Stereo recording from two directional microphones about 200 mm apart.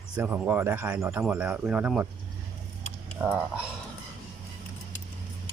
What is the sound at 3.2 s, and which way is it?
Speech, 10° right (ahead or behind).